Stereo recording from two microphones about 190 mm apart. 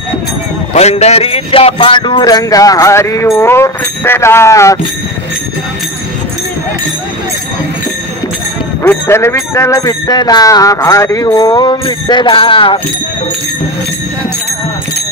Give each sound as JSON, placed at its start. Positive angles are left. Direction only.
{"t": 0.7, "sound": "speech", "side_deg": 35}
{"t": 8.8, "sound": "speech", "side_deg": 15}